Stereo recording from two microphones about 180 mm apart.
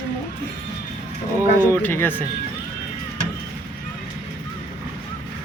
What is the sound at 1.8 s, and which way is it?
Speech, 10° left (ahead or behind).